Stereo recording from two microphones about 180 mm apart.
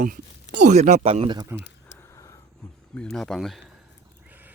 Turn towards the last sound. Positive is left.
turn(degrees=0)  # may be behind; listen again after turning